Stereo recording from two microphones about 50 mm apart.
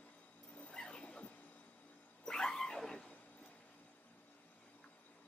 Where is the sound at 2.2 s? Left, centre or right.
Centre.